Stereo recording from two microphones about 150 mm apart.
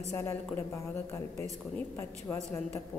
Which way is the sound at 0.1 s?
15° left (ahead or behind).